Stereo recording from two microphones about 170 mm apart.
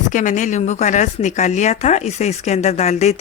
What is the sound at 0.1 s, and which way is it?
A woman's voice, 50° left (ahead or behind).